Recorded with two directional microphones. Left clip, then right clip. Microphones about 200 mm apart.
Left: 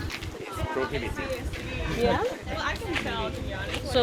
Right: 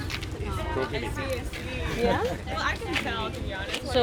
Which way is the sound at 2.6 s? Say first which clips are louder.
Right 3 dB; 35° right (ahead or behind).